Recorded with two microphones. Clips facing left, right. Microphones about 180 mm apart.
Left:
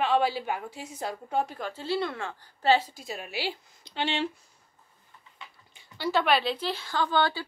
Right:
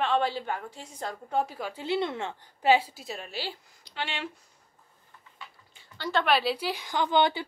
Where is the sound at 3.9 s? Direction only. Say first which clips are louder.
Left 6 dB; 25° left (ahead or behind).